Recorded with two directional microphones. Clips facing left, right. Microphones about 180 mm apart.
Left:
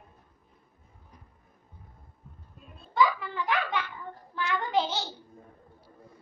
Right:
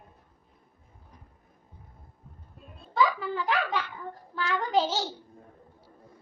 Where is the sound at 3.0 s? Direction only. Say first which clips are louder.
Even; 35° right (ahead or behind).